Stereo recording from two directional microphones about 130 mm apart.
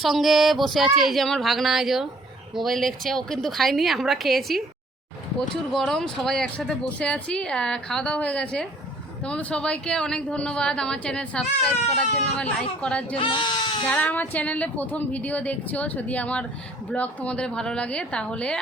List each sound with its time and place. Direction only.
0.0 s speech: centre (ahead or behind)
13.1 s speech: 40° left (ahead or behind)
13.9 s speech: 10° left (ahead or behind)